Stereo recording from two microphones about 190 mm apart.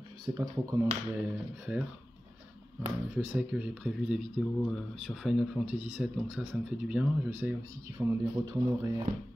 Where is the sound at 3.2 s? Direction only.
5° right (ahead or behind).